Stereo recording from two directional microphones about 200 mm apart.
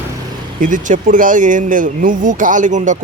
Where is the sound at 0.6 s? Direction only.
40° right (ahead or behind).